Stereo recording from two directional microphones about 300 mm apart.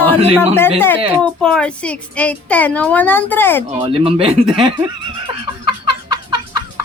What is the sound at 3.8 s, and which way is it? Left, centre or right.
Speech, centre.